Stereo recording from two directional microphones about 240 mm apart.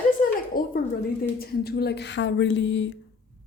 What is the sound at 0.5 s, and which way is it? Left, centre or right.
A woman's voice, left.